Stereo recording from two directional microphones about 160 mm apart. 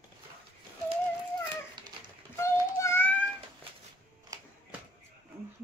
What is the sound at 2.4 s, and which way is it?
Child singing, 15° left (ahead or behind).